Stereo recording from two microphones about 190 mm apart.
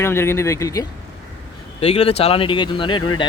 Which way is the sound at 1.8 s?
30° left (ahead or behind).